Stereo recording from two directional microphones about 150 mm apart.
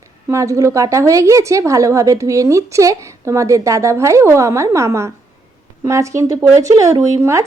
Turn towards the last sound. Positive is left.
turn(degrees=-20)  # may be behind; listen again after turning